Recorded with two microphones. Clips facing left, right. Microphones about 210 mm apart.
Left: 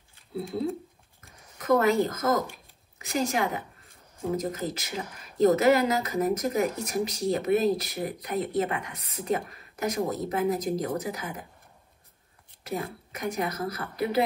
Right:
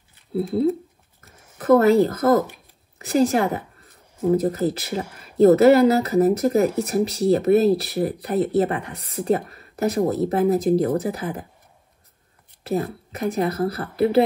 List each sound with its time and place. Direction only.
1.6 s a woman's voice: 30° right (ahead or behind)
13.1 s a woman's voice: 30° right (ahead or behind)